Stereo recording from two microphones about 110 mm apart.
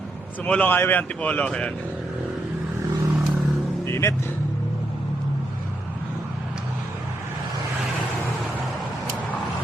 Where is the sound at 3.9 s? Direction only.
25° left (ahead or behind).